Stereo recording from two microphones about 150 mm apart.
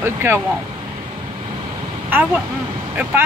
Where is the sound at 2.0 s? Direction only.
10° right (ahead or behind).